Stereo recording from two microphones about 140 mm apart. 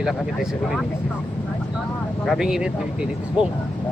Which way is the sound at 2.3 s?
5° right (ahead or behind).